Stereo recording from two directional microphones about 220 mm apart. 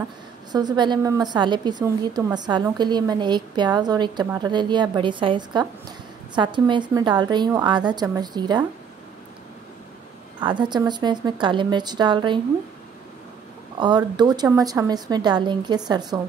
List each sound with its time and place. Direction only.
0.5 s a woman's voice: 20° right (ahead or behind)
10.4 s a woman's voice: 20° right (ahead or behind)
13.7 s a woman's voice: 20° right (ahead or behind)